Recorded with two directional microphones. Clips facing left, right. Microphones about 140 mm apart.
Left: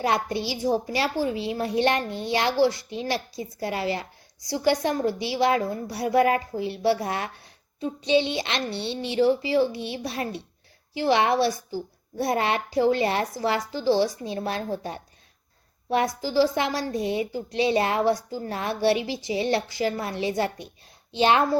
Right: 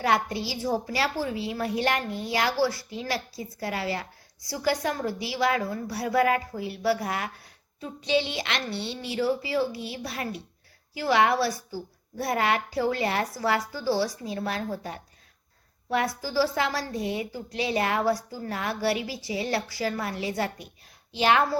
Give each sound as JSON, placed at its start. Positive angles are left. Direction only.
{"t": 0.0, "sound": "a woman's voice", "side_deg": 20}